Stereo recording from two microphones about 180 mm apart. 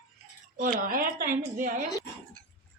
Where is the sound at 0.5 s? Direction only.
45° right (ahead or behind).